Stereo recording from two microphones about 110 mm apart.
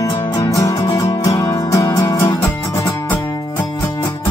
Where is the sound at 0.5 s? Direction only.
30° left (ahead or behind).